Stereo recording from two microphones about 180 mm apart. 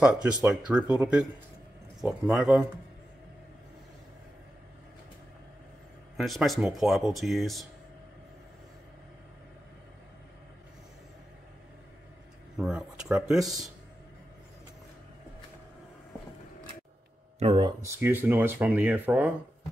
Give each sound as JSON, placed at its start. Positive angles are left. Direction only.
{"t": 0.0, "sound": "speech", "side_deg": -5}
{"t": 6.1, "sound": "speech", "side_deg": 0}
{"t": 12.5, "sound": "speech", "side_deg": -5}
{"t": 17.4, "sound": "speech", "side_deg": -30}
{"t": 17.8, "sound": "speech", "side_deg": -10}